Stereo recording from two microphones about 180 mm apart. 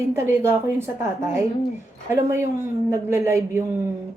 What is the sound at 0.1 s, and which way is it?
Speech, 15° right (ahead or behind).